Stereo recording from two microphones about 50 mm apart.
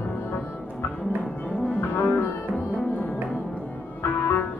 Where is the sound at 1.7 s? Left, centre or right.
Left.